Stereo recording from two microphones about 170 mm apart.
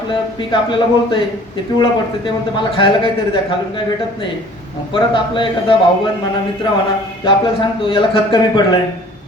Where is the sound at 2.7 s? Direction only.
30° left (ahead or behind).